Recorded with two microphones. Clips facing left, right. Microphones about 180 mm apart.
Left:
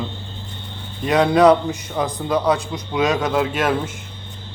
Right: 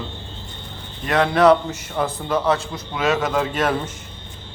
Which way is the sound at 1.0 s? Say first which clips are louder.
Left 2 dB; 15° left (ahead or behind).